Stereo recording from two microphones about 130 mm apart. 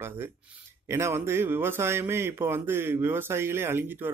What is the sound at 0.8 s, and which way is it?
A man's voice, 20° right (ahead or behind).